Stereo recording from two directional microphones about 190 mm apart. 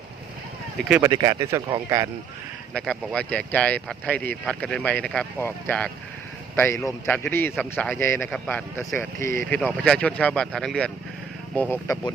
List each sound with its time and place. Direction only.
0.9 s speech: 5° right (ahead or behind)
1.1 s speech: 20° right (ahead or behind)
2.7 s speech: centre (ahead or behind)